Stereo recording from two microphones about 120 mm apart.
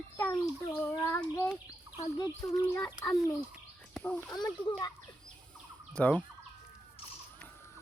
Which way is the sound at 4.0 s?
15° left (ahead or behind).